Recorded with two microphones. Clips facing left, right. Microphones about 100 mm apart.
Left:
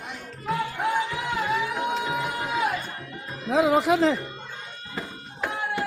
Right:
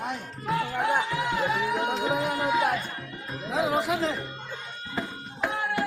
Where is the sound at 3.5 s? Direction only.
85° left.